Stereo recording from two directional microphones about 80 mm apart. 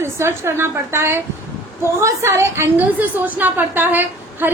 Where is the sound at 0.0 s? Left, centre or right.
Right.